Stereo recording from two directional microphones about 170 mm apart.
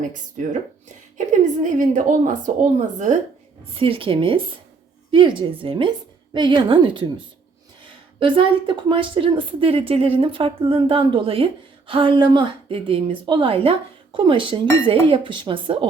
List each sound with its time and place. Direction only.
0.4 s a woman's voice: 50° right (ahead or behind)
3.8 s a woman's voice: 30° right (ahead or behind)